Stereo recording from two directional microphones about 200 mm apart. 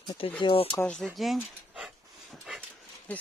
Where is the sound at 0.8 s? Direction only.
5° left (ahead or behind).